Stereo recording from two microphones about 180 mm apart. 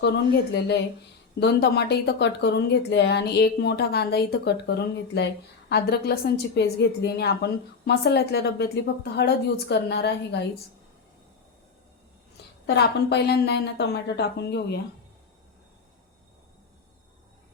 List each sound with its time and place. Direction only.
1.4 s a woman's voice: 65° left (ahead or behind)
12.6 s a woman's voice: 65° left (ahead or behind)